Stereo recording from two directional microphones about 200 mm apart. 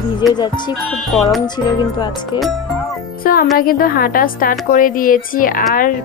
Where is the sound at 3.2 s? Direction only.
45° left (ahead or behind).